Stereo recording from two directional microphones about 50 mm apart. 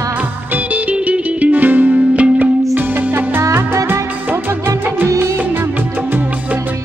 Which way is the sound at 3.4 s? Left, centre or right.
Right.